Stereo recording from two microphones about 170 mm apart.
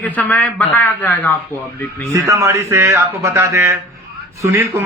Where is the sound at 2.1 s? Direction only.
15° right (ahead or behind).